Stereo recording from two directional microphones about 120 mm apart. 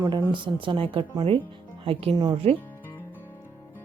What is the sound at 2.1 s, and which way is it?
Speech, 30° right (ahead or behind).